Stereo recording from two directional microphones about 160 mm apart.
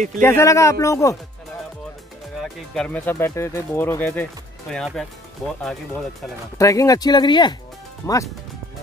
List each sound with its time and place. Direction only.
0.2 s speech: 15° left (ahead or behind)
2.4 s speech: 5° left (ahead or behind)
3.1 s speech: 15° left (ahead or behind)
6.6 s speech: 20° left (ahead or behind)